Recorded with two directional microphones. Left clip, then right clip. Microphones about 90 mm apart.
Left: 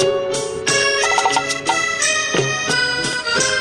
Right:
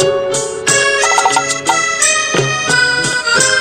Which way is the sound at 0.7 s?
40° right (ahead or behind).